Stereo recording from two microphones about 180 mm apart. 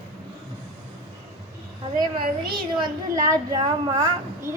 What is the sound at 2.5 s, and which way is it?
A woman's voice, 25° right (ahead or behind).